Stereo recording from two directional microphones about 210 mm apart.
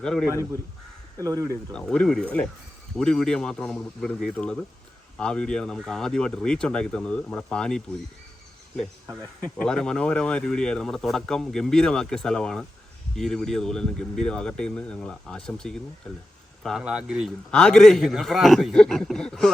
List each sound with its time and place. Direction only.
0.0 s speech: centre (ahead or behind)
1.2 s speech: 15° right (ahead or behind)
1.7 s speech: 5° left (ahead or behind)
9.4 s speech: 5° left (ahead or behind)